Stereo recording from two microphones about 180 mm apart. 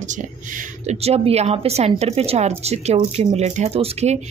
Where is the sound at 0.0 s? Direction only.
45° right (ahead or behind).